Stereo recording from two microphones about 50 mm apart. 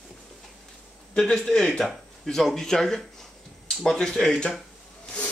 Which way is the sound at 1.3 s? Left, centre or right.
Centre.